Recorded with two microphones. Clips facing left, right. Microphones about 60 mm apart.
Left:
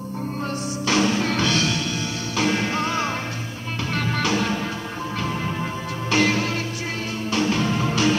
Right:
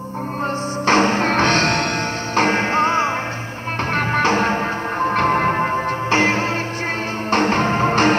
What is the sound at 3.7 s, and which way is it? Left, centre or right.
Music, right.